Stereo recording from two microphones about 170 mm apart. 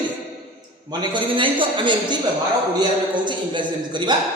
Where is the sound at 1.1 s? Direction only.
30° right (ahead or behind).